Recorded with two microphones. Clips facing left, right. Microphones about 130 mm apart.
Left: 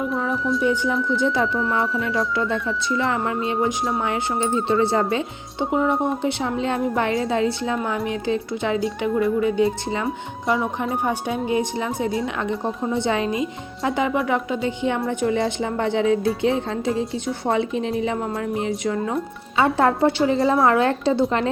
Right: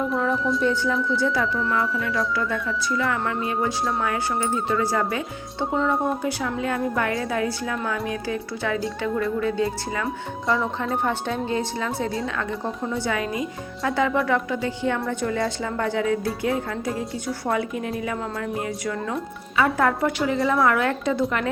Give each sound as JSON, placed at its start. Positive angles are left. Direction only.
{"t": 0.1, "sound": "speech", "side_deg": 0}
{"t": 0.6, "sound": "speech", "side_deg": 15}
{"t": 10.8, "sound": "speech", "side_deg": 10}